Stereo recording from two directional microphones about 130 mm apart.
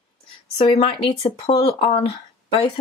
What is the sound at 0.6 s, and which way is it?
Speech, 50° left (ahead or behind).